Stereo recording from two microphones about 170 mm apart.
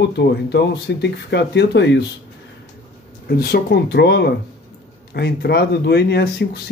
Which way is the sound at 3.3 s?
65° left (ahead or behind).